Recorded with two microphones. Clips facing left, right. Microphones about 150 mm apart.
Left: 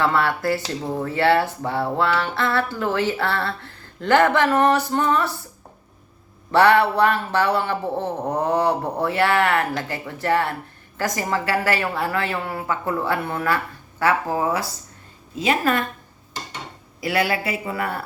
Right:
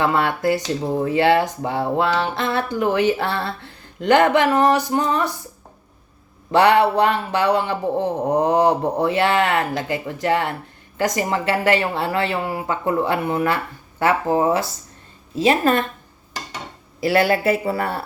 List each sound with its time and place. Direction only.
0.0 s a man's voice: 20° right (ahead or behind)
6.5 s a man's voice: 15° right (ahead or behind)
17.0 s speech: 30° right (ahead or behind)